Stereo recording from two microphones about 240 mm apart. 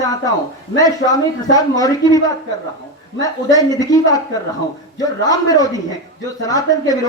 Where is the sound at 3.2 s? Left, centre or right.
Centre.